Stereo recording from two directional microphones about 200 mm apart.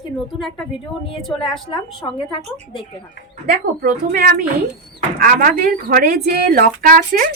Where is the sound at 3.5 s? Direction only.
45° right (ahead or behind).